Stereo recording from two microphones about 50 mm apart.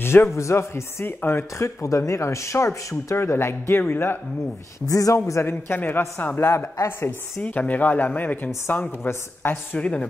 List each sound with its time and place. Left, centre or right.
0.0 s a sound: left
0.3 s speech: left
1.0 s speech: left
1.6 s speech: left
3.8 s speech: left
4.9 s a man's voice: left
5.8 s speech: left
7.4 s speech: left
9.8 s a woman's voice: left